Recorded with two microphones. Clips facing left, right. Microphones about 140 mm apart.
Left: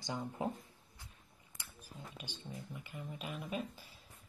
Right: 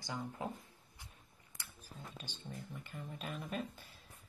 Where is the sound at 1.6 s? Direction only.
15° left (ahead or behind).